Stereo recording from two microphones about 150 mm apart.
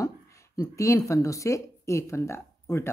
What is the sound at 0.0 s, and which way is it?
Speech, 20° left (ahead or behind).